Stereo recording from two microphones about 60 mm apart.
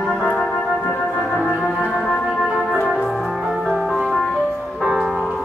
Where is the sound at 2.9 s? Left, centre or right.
Centre.